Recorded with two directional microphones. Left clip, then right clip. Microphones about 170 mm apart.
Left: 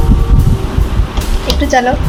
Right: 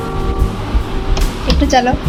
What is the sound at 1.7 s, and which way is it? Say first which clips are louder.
Speech: left 2 dB; centre (ahead or behind).